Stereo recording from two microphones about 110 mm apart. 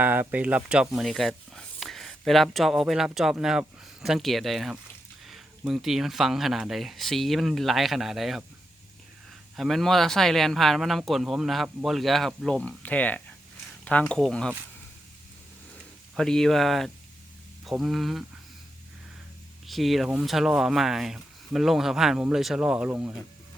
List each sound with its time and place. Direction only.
0.0 s speech: 15° right (ahead or behind); by 8.4 s centre (ahead or behind)
9.6 s speech: centre (ahead or behind)
16.1 s speech: 5° left (ahead or behind)
19.6 s speech: centre (ahead or behind)
22.9 s speech: 20° right (ahead or behind)